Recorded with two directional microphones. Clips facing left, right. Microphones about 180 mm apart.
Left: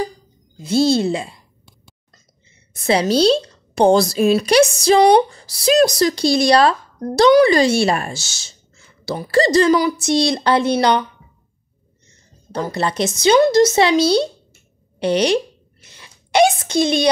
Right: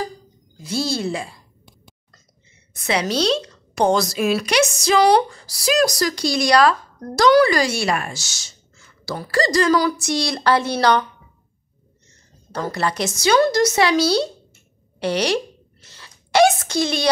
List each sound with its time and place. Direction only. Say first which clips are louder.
0.6 s speech: left 8 dB; 25° left (ahead or behind)
2.7 s speech: left 5 dB; 30° left (ahead or behind)
12.5 s speech: left 2 dB; 20° left (ahead or behind)
15.0 s a sound: left 4 dB; 20° left (ahead or behind)